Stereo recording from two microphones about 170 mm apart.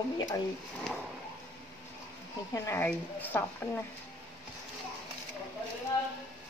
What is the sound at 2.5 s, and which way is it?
A woman's voice, 15° left (ahead or behind).